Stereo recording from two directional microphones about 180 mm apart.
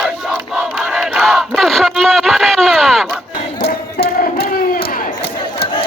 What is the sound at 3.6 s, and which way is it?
Chant, 60° left (ahead or behind).